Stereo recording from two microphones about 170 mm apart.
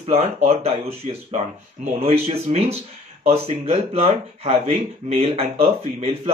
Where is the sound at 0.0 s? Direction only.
35° right (ahead or behind).